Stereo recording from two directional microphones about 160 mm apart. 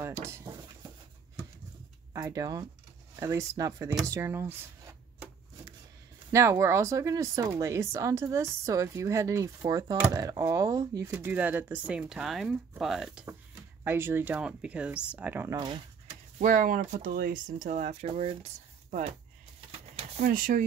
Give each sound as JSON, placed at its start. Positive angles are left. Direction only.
{"t": 0.2, "sound": "a sound", "side_deg": -20}
{"t": 2.1, "sound": "speech", "side_deg": -20}
{"t": 6.3, "sound": "speech", "side_deg": -20}
{"t": 15.5, "sound": "speech", "side_deg": -30}
{"t": 16.3, "sound": "speech", "side_deg": -55}
{"t": 20.2, "sound": "speech", "side_deg": -55}